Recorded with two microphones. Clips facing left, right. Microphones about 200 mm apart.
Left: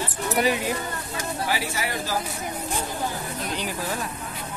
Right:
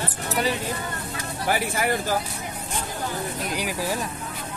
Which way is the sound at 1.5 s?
50° right (ahead or behind).